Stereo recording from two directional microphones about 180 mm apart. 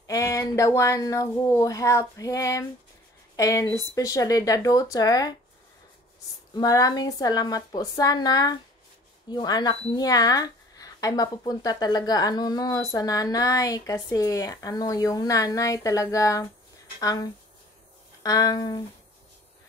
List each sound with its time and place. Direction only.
0.0 s speech: 20° left (ahead or behind)
6.5 s speech: 20° left (ahead or behind)